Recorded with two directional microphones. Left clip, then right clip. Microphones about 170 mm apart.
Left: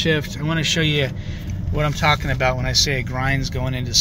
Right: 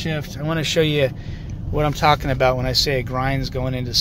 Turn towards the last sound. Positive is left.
turn(degrees=-15)  # may be behind; listen again after turning